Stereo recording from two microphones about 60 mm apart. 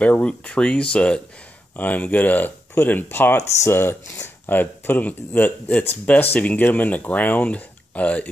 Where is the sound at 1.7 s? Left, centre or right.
Left.